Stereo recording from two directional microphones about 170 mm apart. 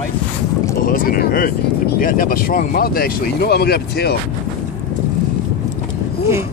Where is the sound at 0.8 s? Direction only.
55° left (ahead or behind).